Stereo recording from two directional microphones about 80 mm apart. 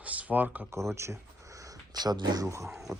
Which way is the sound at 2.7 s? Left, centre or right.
Centre.